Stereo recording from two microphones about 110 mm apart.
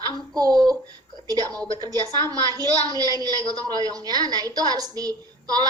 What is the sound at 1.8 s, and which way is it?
A woman's voice, 35° right (ahead or behind).